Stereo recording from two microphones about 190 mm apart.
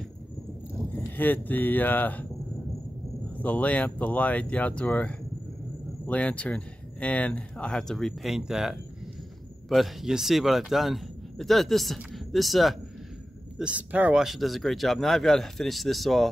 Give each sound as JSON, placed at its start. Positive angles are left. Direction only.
{"t": 0.9, "sound": "speech", "side_deg": 10}
{"t": 3.3, "sound": "speech", "side_deg": 10}